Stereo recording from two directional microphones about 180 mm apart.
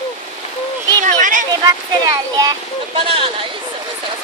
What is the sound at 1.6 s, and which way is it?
Speech, 20° right (ahead or behind).